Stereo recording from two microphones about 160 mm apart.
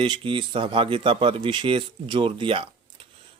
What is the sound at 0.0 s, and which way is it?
Speech, 30° right (ahead or behind).